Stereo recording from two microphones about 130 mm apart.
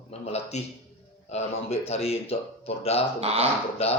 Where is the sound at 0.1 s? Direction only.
55° left (ahead or behind).